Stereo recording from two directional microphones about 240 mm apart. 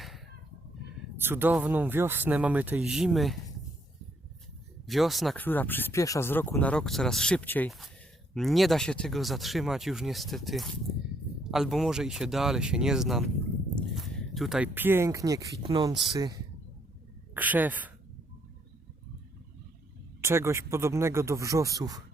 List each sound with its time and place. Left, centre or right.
1.2 s speech: centre
4.9 s a woman's voice: centre
20.2 s speech: centre